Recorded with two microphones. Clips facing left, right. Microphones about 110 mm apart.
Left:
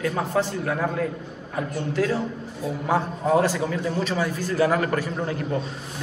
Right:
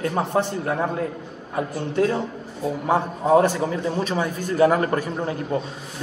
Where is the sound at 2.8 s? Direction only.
20° right (ahead or behind).